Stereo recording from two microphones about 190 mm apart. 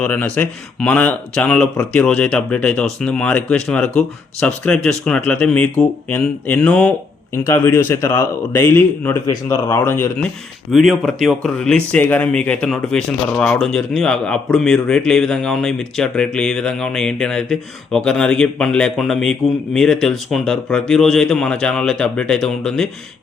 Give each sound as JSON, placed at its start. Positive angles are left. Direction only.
{"t": 0.0, "sound": "speech", "side_deg": 10}
{"t": 10.7, "sound": "speech", "side_deg": 0}